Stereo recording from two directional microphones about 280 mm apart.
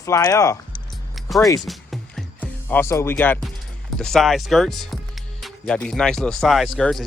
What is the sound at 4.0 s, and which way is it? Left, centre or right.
Speech, centre.